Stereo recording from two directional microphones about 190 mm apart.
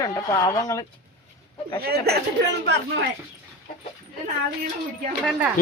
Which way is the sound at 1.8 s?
55° right (ahead or behind).